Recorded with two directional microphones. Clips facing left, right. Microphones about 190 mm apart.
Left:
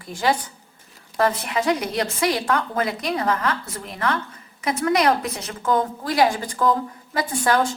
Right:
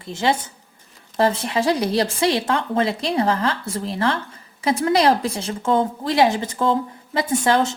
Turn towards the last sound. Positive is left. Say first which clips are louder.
# right 2 dB
turn(degrees=-25)  # may be behind; listen again after turning